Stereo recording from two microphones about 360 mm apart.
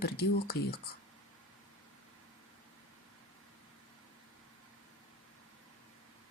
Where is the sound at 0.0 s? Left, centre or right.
Left.